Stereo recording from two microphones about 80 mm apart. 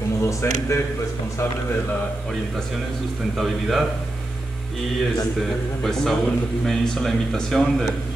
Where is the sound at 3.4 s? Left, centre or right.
Centre.